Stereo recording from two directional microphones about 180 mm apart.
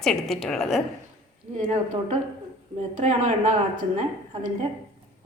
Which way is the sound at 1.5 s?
45° right (ahead or behind).